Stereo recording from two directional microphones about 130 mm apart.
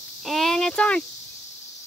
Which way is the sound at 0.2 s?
Centre (ahead or behind).